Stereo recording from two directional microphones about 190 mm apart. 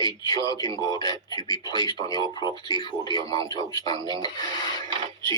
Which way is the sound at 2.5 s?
25° right (ahead or behind).